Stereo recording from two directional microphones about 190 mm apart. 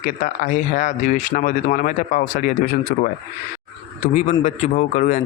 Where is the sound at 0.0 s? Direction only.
40° left (ahead or behind).